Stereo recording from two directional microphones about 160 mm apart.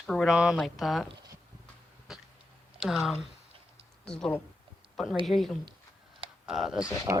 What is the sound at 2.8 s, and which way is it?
Speech, centre (ahead or behind).